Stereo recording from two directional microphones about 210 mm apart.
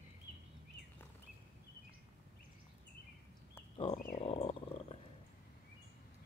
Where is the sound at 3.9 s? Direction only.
40° left (ahead or behind).